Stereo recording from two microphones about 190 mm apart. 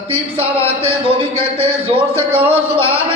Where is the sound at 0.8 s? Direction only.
30° right (ahead or behind).